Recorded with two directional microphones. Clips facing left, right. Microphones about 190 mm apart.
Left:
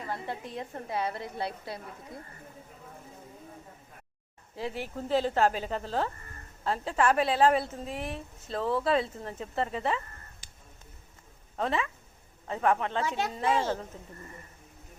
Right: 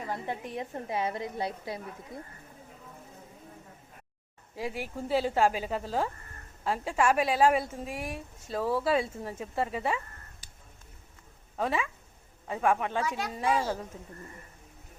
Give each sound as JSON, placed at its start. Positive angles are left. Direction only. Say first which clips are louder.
{"t": 0.1, "sound": "a woman's voice", "louder": "right 1 dB", "side_deg": -15}
{"t": 4.5, "sound": "a woman's voice", "louder": "even", "side_deg": -10}
{"t": 11.5, "sound": "a woman's voice", "louder": "even", "side_deg": -10}
{"t": 13.0, "sound": "a child's voice", "louder": "left 1 dB", "side_deg": 25}